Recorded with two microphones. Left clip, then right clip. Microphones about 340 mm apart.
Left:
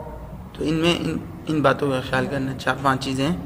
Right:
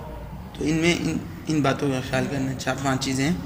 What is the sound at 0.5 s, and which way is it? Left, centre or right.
A man's voice, centre.